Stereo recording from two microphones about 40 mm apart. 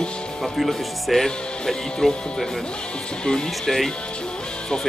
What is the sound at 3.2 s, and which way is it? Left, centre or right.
Speech, centre.